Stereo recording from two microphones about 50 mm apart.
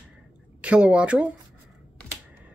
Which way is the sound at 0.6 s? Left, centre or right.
Right.